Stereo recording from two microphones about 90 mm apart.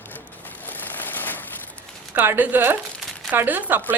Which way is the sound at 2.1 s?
25° right (ahead or behind).